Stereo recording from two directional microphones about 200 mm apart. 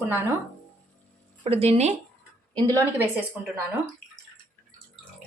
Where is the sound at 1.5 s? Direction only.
30° right (ahead or behind).